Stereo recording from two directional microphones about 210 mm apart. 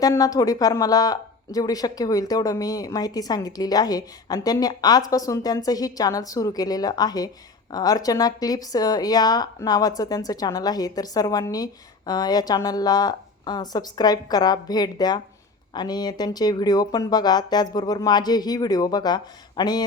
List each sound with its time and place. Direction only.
0.0 s a woman's voice: 15° left (ahead or behind)